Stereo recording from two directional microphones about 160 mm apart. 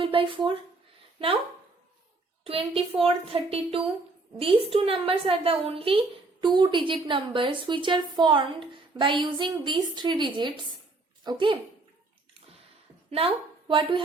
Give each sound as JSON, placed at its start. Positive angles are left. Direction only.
{"t": 0.0, "sound": "speech", "side_deg": -35}
{"t": 2.4, "sound": "a woman's voice", "side_deg": -35}
{"t": 13.1, "sound": "speech", "side_deg": -35}